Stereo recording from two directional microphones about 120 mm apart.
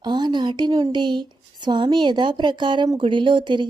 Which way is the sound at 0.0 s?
40° right (ahead or behind).